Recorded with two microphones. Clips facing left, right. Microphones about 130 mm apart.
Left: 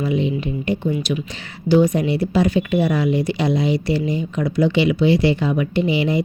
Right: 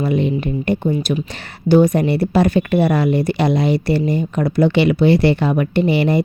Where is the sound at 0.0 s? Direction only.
55° right (ahead or behind).